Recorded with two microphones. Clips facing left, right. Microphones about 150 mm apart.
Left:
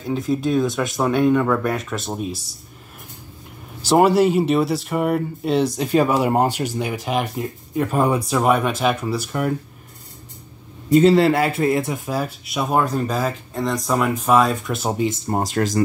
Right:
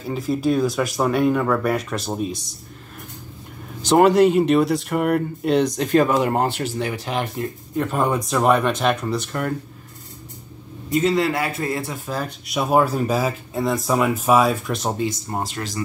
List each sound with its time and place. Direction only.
0.0 s speech: centre (ahead or behind)
3.9 s speech: 5° left (ahead or behind)
10.9 s a man's voice: 30° left (ahead or behind)
12.1 s speech: 10° left (ahead or behind)
12.5 s speech: 5° right (ahead or behind)
15.2 s speech: 30° left (ahead or behind)
15.5 s speech: 45° left (ahead or behind)